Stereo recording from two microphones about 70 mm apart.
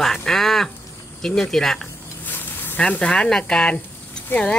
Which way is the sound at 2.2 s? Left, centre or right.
Left.